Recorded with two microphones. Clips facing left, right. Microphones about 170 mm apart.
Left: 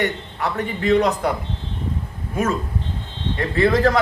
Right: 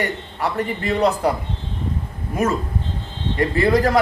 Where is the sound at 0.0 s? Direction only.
10° right (ahead or behind).